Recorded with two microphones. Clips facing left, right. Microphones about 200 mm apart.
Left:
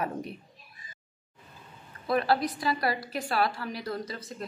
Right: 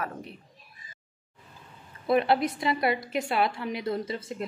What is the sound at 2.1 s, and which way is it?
A woman's voice, 20° right (ahead or behind).